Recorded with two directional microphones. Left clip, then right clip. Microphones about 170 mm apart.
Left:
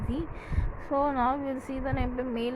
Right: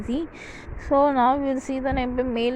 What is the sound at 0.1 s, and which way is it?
Speech, 35° right (ahead or behind).